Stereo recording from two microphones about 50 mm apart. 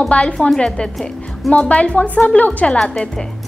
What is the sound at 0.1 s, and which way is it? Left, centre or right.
A woman's voice, centre.